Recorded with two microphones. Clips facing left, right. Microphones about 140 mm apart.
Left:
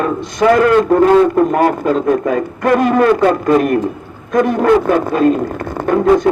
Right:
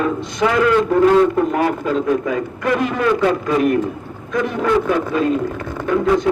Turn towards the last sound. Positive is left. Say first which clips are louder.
# left 5 dB
turn(degrees=45)  # may be behind; listen again after turning